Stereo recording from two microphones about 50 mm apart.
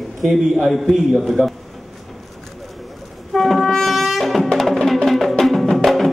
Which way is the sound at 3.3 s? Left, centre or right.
Centre.